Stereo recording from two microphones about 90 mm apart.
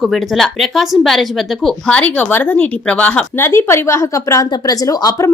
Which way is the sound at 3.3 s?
30° left (ahead or behind).